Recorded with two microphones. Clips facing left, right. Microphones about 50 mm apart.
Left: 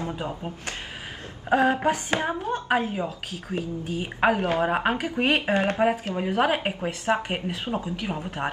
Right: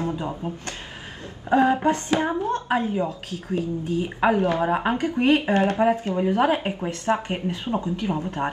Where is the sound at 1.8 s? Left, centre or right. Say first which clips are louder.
Right 3 dB; centre.